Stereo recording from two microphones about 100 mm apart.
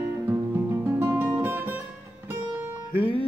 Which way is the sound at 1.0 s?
25° right (ahead or behind).